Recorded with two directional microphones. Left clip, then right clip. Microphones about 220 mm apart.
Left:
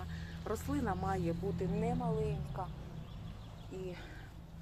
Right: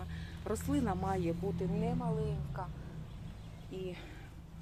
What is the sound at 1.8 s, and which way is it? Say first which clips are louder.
Speech: left 3 dB; 15° right (ahead or behind).